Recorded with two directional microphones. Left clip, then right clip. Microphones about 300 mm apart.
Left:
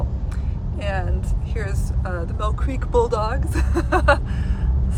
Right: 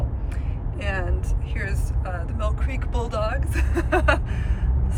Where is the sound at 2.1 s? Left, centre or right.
Centre.